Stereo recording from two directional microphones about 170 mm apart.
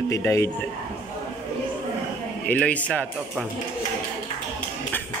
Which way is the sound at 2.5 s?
10° left (ahead or behind).